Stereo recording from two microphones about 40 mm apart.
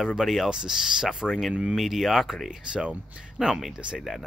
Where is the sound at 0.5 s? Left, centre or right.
Centre.